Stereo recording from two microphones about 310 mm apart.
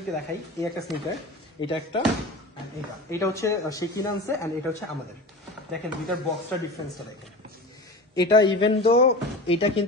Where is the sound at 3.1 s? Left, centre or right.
Centre.